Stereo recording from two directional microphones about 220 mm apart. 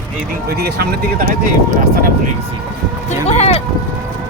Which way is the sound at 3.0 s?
30° left (ahead or behind).